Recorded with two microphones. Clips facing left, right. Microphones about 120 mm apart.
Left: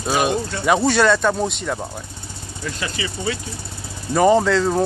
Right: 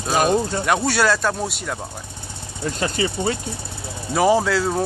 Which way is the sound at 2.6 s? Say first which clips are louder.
Right 5 dB; 40° right (ahead or behind).